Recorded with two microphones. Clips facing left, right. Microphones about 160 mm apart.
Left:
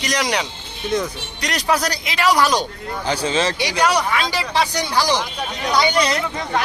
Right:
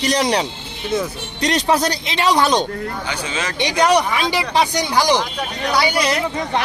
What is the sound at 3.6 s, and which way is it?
Speech, 20° right (ahead or behind).